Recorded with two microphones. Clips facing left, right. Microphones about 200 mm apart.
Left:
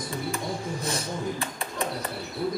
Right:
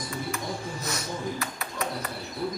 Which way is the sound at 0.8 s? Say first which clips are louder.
Left 1 dB; 30° left (ahead or behind).